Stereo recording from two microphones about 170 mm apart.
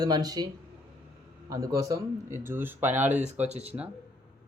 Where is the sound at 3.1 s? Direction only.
40° right (ahead or behind).